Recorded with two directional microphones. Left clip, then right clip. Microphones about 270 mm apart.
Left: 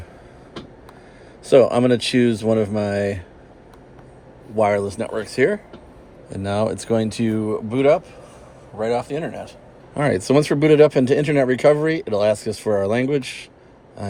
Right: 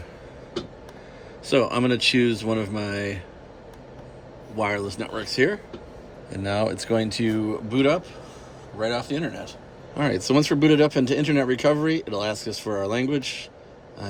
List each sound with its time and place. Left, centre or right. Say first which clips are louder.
1.5 s speech: left 7 dB; centre
4.5 s speech: left 7 dB; centre